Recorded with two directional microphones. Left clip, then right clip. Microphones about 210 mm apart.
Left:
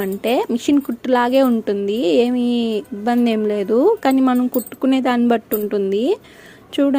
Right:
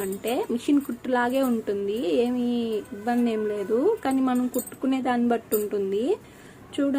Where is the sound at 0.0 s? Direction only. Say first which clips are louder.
Left 9 dB; 40° left (ahead or behind).